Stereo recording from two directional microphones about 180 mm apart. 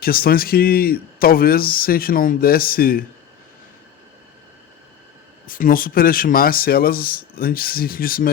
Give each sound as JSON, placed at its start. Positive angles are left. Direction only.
{"t": 0.0, "sound": "speech", "side_deg": 55}
{"t": 5.5, "sound": "speech", "side_deg": 50}